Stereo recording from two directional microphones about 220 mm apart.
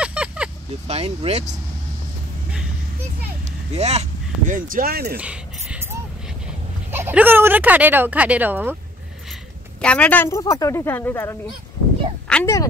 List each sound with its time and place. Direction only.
0.0 s vehicle: 5° right (ahead or behind)
0.8 s speech: 30° right (ahead or behind)
3.7 s speech: 30° right (ahead or behind)
5.1 s a sound: 5° right (ahead or behind)
6.9 s speech: 10° right (ahead or behind)
9.8 s speech: 5° left (ahead or behind)